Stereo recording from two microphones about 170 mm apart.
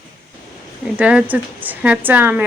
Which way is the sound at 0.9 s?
5° right (ahead or behind).